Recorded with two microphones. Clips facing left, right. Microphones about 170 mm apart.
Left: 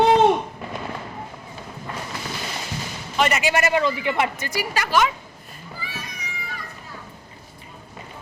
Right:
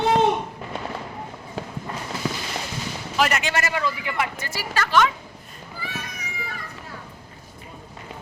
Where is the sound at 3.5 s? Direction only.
20° left (ahead or behind).